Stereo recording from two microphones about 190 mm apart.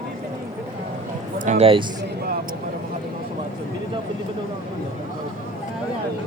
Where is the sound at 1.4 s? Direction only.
35° right (ahead or behind).